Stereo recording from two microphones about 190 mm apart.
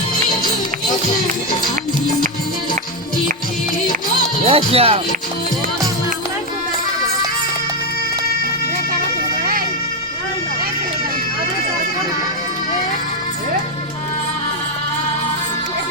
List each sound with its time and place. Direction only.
4.4 s speech: 30° right (ahead or behind)